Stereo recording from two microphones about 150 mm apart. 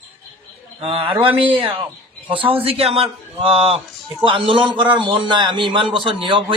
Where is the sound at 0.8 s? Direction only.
35° right (ahead or behind).